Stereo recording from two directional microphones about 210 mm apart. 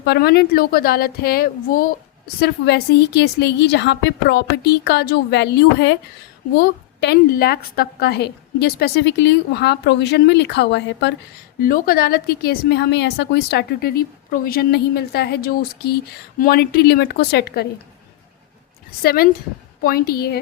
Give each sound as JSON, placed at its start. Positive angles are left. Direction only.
{"t": 0.0, "sound": "a woman's voice", "side_deg": 50}
{"t": 11.6, "sound": "a woman's voice", "side_deg": 45}
{"t": 19.0, "sound": "a woman's voice", "side_deg": 45}